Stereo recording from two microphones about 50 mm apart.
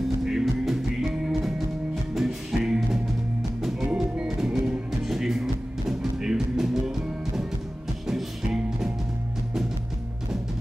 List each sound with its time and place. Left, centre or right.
0.2 s music: centre
3.9 s music: right
4.4 s music: centre
8.1 s music: centre